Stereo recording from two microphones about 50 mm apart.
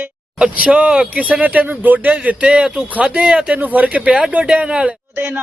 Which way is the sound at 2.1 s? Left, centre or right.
Right.